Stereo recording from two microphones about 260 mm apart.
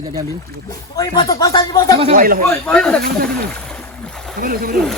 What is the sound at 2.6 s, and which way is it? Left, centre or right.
Speech, centre.